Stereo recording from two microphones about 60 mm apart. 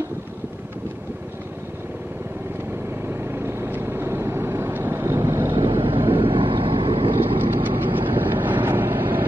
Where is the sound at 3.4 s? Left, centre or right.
Right.